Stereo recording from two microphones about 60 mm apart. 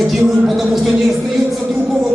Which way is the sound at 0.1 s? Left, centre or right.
Centre.